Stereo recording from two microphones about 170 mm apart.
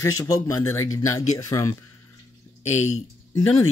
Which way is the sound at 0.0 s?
20° left (ahead or behind).